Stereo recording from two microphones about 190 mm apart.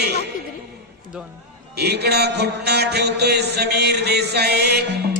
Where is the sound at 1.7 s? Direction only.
60° right (ahead or behind).